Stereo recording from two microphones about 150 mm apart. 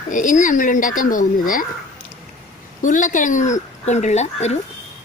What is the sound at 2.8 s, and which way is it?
Speech, 60° left (ahead or behind).